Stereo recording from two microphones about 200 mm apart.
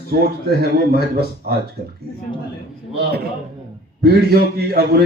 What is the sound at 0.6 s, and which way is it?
Speech, 50° right (ahead or behind).